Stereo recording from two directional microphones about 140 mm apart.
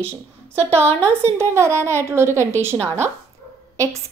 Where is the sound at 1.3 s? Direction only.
20° right (ahead or behind).